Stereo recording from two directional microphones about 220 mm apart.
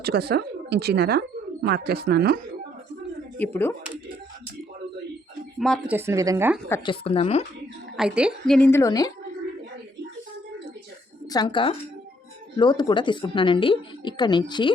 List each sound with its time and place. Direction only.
0.0 s speech: 45° right (ahead or behind)
3.3 s a woman's voice: 10° left (ahead or behind)
5.5 s speech: centre (ahead or behind)
5.9 s speech: 10° right (ahead or behind)
6.7 s a woman's voice: 10° left (ahead or behind)
6.9 s a woman's voice: 25° left (ahead or behind)
7.9 s a woman's voice: 5° right (ahead or behind); by 9.1 s 15° left (ahead or behind)
11.3 s a woman's voice: 20° left (ahead or behind)